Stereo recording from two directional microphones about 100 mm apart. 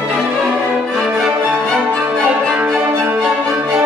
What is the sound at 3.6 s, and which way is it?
Music, 10° right (ahead or behind).